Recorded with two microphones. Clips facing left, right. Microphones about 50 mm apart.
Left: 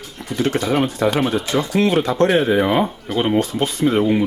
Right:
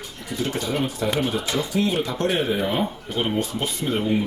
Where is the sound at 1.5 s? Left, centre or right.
Left.